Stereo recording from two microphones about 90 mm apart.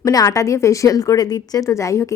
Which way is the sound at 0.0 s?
40° left (ahead or behind).